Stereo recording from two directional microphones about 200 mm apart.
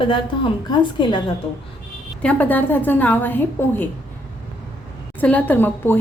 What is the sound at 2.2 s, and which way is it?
A woman's voice, 10° left (ahead or behind).